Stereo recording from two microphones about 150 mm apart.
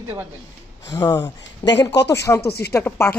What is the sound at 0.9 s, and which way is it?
Speech, 20° left (ahead or behind).